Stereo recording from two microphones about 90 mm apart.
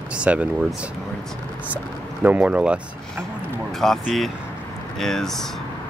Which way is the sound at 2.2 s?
15° right (ahead or behind).